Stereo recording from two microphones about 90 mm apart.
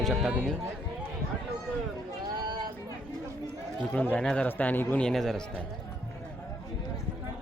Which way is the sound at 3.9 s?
15° left (ahead or behind).